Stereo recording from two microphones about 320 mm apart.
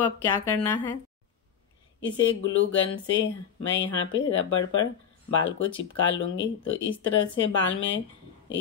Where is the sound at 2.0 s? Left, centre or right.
Left.